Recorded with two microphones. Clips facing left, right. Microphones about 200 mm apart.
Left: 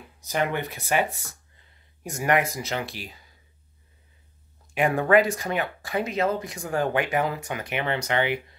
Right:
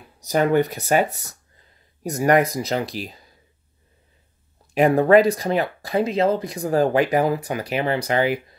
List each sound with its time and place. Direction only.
0.2 s speech: 40° right (ahead or behind)
4.7 s speech: 35° right (ahead or behind)